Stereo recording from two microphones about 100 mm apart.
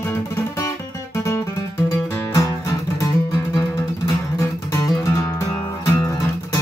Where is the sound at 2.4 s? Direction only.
30° left (ahead or behind).